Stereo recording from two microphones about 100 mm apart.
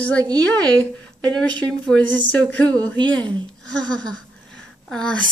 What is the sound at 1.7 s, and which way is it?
Speech, 5° left (ahead or behind).